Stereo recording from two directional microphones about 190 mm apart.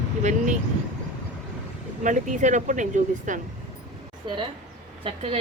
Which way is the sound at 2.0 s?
40° right (ahead or behind).